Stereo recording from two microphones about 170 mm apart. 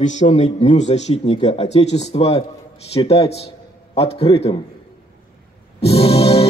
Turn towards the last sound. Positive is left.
turn(degrees=35)  # may be behind; listen again after turning